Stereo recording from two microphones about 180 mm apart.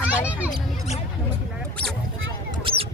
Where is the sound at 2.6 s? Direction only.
30° right (ahead or behind).